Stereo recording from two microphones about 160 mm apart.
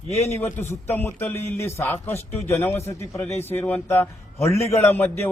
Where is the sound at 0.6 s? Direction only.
15° left (ahead or behind).